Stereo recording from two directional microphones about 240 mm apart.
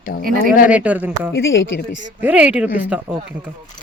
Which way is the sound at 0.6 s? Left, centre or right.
Centre.